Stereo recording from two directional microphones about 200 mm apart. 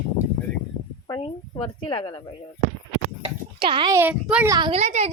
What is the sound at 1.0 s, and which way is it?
A woman's voice, 25° left (ahead or behind).